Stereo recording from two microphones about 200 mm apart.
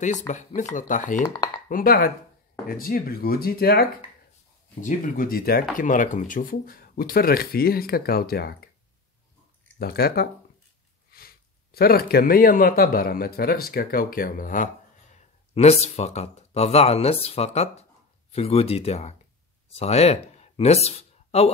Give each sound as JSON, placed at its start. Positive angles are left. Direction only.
{"t": 0.6, "sound": "speech", "side_deg": 40}
{"t": 1.2, "sound": "speech", "side_deg": 20}
{"t": 1.7, "sound": "speech", "side_deg": 45}
{"t": 4.8, "sound": "speech", "side_deg": 40}
{"t": 9.8, "sound": "speech", "side_deg": 50}
{"t": 15.1, "sound": "speech", "side_deg": 30}